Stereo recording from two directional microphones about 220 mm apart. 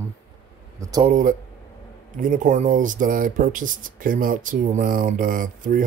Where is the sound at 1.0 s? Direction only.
35° right (ahead or behind).